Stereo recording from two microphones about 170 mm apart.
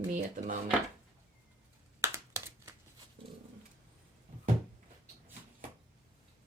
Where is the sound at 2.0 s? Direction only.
15° right (ahead or behind).